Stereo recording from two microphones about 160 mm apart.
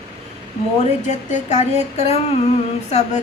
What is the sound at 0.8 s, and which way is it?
A woman's voice, 50° left (ahead or behind).